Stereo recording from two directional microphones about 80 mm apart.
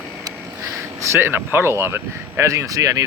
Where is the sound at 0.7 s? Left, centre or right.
Right.